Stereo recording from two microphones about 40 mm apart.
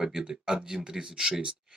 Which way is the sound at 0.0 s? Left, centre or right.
Centre.